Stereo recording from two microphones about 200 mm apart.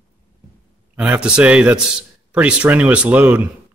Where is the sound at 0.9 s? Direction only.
5° right (ahead or behind).